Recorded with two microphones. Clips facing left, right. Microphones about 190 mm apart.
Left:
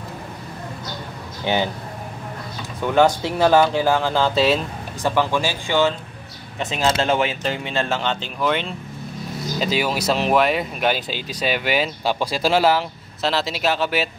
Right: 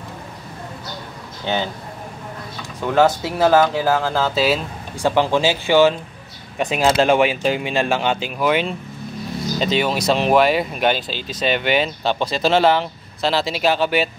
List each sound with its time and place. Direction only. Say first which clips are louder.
1.4 s speech: left 1 dB; 15° left (ahead or behind)
2.8 s speech: even; centre (ahead or behind)
5.0 s speech: right 4 dB; 15° right (ahead or behind)
9.6 s speech: right 2 dB; 5° left (ahead or behind)
11.1 s speech: right 2 dB; 10° left (ahead or behind)